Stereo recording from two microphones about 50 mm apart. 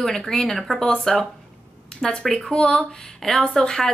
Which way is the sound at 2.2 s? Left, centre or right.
Centre.